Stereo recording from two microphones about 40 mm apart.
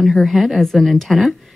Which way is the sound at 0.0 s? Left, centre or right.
Centre.